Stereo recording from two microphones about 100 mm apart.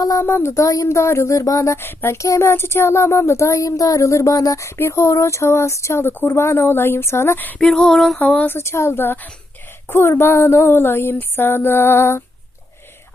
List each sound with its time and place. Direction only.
0.0 s speech: 35° left (ahead or behind)
0.3 s speech: 25° left (ahead or behind)
7.6 s a sound: 5° left (ahead or behind)
8.2 s speech: 15° left (ahead or behind)